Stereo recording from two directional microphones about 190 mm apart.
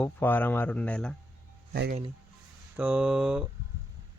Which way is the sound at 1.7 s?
55° right (ahead or behind).